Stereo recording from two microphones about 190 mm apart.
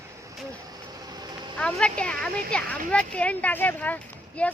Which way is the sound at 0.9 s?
20° right (ahead or behind).